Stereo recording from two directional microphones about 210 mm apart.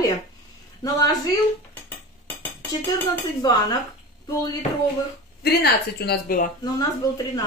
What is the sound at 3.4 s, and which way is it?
Speech, 20° left (ahead or behind).